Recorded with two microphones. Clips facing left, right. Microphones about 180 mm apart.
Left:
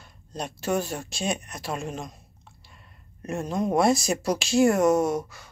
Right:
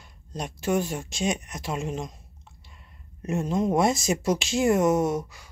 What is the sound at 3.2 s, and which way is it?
Speech, 20° right (ahead or behind).